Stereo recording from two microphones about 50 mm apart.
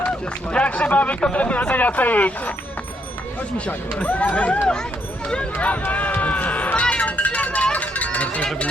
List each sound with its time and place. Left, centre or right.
0.5 s speech: left
4.0 s speech: left
5.8 s run: left
6.9 s a sound: left